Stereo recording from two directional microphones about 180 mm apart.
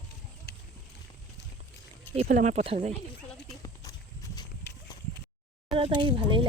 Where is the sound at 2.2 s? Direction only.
50° right (ahead or behind).